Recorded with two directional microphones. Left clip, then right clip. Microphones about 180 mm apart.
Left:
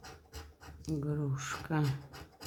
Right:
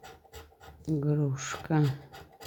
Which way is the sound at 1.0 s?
30° right (ahead or behind).